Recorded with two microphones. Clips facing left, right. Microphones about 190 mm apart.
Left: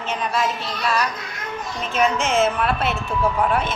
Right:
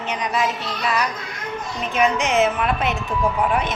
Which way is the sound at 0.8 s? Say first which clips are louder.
Even; 20° right (ahead or behind).